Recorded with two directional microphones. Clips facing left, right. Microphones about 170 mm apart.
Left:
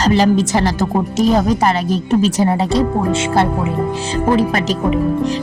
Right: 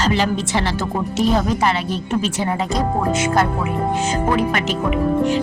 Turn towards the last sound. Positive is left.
turn(degrees=35)  # may be behind; listen again after turning